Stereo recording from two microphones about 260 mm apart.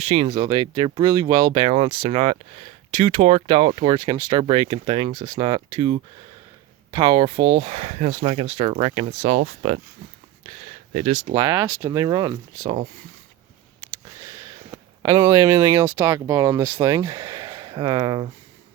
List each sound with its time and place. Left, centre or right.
0.0 s speech: right
10.9 s speech: right
11.4 s speech: centre
14.3 s a sound: centre
16.0 s speech: centre